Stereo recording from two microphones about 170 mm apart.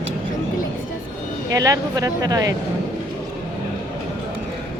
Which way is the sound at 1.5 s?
20° right (ahead or behind).